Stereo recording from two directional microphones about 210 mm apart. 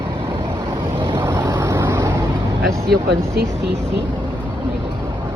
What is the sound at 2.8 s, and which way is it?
Speech, 50° right (ahead or behind).